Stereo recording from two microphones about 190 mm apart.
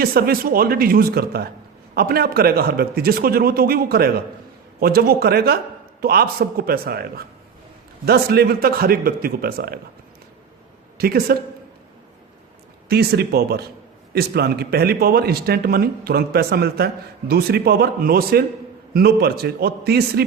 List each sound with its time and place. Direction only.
0.0 s speech: 50° right (ahead or behind)
10.9 s speech: 55° right (ahead or behind)
12.9 s speech: 55° right (ahead or behind)